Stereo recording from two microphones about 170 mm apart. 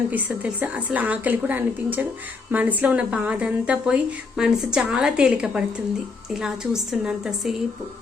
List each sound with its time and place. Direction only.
0.1 s a woman's voice: 10° right (ahead or behind)